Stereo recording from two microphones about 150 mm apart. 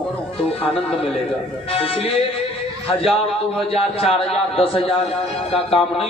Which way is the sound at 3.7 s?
40° left (ahead or behind).